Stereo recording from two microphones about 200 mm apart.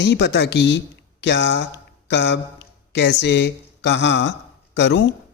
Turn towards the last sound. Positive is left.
turn(degrees=60)  # may be behind; listen again after turning